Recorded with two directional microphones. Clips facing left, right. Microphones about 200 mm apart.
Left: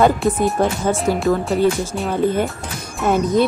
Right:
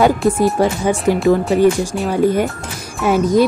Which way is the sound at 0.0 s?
10° right (ahead or behind).